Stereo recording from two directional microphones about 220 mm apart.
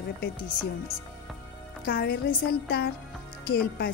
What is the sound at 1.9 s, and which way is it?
Speech, 40° left (ahead or behind).